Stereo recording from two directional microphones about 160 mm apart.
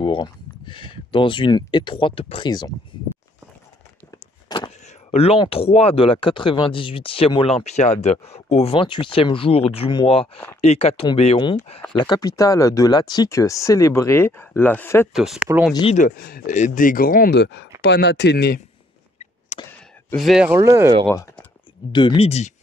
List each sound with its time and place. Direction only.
0.0 s speech: 30° left (ahead or behind)
4.5 s a sound: 30° left (ahead or behind)
5.4 s speech: 35° left (ahead or behind)
12.0 s speech: 25° left (ahead or behind)
15.1 s speech: centre (ahead or behind)
16.2 s speech: 65° left (ahead or behind); by 18.6 s 90° left
19.5 s a sound: 45° left (ahead or behind)
20.2 s speech: centre (ahead or behind)
20.4 s speech: 15° right (ahead or behind)
21.1 s speech: 15° left (ahead or behind)
21.9 s speech: 30° left (ahead or behind)